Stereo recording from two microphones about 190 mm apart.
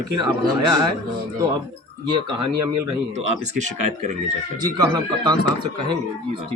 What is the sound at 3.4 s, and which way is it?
Speech, 40° right (ahead or behind).